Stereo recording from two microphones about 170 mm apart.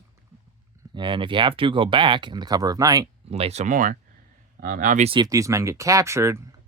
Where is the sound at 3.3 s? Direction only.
40° right (ahead or behind).